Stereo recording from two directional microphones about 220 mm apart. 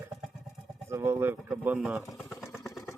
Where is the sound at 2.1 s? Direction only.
10° left (ahead or behind).